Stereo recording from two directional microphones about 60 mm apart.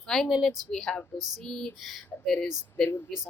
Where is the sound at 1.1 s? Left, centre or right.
Right.